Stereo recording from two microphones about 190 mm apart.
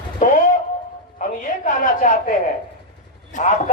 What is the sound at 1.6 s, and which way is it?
A woman's voice, 40° left (ahead or behind).